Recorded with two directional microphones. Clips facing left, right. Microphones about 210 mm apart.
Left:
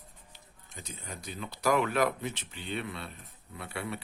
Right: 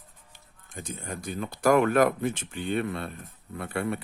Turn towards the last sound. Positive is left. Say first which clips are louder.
# right 8 dB
turn(degrees=-50)  # may be behind; listen again after turning